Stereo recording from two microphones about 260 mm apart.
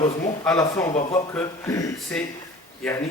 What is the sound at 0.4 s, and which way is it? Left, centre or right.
A man's voice, centre.